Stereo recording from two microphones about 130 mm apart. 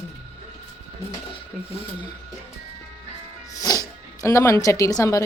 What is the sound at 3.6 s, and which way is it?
Speech, 30° left (ahead or behind).